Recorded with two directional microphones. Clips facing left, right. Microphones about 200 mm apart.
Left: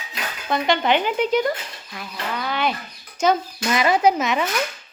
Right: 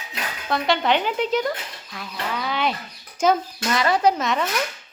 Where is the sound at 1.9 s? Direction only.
Centre (ahead or behind).